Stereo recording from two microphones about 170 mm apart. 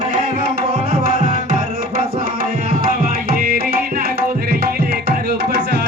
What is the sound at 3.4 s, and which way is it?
Music, 60° right (ahead or behind).